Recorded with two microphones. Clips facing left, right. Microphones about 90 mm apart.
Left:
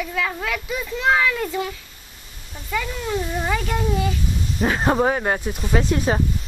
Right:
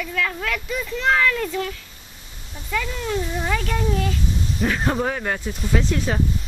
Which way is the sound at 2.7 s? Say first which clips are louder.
Even; 10° left (ahead or behind).